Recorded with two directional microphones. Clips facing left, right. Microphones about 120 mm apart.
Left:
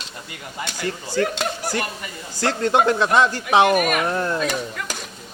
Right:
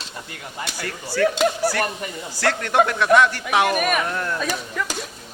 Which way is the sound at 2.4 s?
25° left (ahead or behind).